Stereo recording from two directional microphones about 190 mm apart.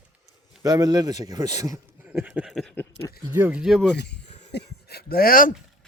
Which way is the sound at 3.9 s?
60° left (ahead or behind).